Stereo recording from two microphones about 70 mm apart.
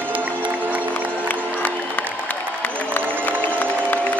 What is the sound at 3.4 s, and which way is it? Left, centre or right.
Music, left.